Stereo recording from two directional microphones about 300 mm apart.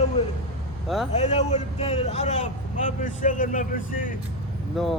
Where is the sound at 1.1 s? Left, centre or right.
Left.